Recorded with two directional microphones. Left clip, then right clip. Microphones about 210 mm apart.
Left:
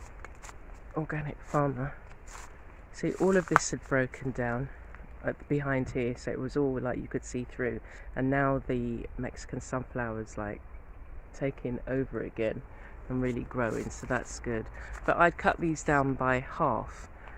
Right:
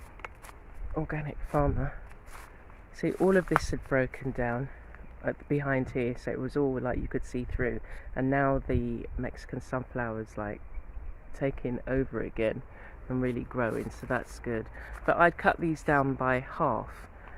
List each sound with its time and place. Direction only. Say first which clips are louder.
0.9 s speech: even; 10° right (ahead or behind)
11.3 s speech: right 2 dB; 25° right (ahead or behind); by 17.3 s 10° right (ahead or behind)